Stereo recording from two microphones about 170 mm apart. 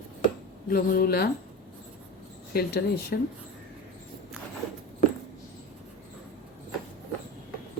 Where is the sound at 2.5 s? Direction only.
65° left (ahead or behind).